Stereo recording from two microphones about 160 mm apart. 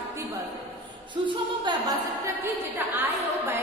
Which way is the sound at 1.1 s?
30° right (ahead or behind).